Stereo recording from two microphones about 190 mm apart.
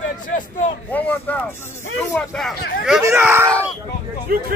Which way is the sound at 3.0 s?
15° right (ahead or behind).